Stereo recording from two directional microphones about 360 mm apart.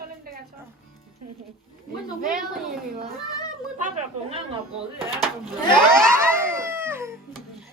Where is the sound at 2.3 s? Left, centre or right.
Centre.